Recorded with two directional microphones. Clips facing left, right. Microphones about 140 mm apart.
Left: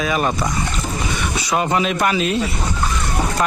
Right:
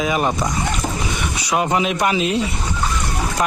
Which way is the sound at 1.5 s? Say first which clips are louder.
Even; 10° right (ahead or behind).